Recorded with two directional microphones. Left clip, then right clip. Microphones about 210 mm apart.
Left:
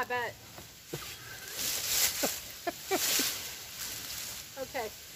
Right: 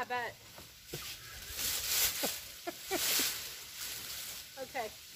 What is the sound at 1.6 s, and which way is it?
Zipper, 15° right (ahead or behind).